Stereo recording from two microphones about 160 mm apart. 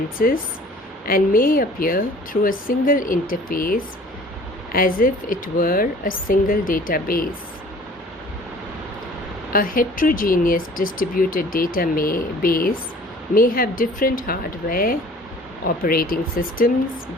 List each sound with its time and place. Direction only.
1.0 s speech: 60° left (ahead or behind)
9.5 s speech: 60° left (ahead or behind)